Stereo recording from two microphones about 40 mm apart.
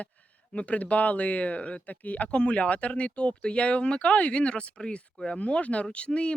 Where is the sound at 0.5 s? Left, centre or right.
Left.